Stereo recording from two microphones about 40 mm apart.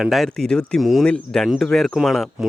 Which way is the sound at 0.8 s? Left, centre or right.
Centre.